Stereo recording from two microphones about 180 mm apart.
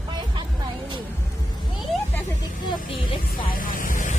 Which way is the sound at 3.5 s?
50° left (ahead or behind).